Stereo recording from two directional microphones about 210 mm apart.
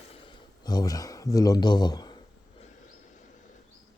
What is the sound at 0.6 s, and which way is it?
Speech, 20° left (ahead or behind).